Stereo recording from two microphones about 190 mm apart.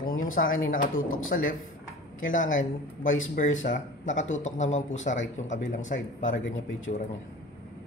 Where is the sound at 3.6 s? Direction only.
40° left (ahead or behind).